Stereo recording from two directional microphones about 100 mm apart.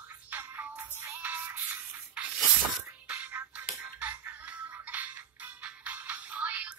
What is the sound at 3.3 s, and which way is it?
Music, 15° right (ahead or behind).